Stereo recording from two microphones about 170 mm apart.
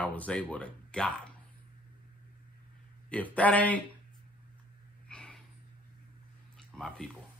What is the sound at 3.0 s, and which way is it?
Music, 10° left (ahead or behind).